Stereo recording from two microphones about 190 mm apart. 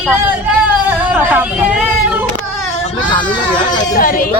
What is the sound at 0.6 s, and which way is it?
Hubbub, 10° right (ahead or behind).